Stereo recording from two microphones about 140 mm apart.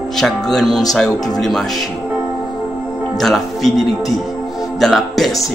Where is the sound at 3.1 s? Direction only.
Centre (ahead or behind).